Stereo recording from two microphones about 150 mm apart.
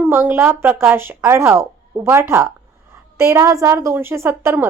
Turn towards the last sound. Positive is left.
turn(degrees=-15)  # may be behind; listen again after turning